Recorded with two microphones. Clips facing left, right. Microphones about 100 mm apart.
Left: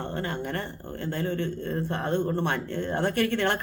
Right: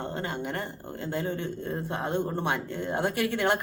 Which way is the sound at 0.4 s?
15° right (ahead or behind).